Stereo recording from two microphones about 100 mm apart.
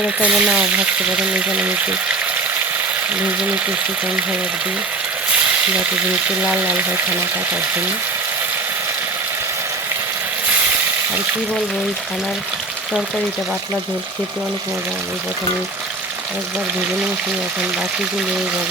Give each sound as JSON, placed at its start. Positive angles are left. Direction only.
{"t": 0.0, "sound": "speech", "side_deg": -10}
{"t": 3.2, "sound": "speech", "side_deg": -15}
{"t": 6.4, "sound": "speech", "side_deg": -15}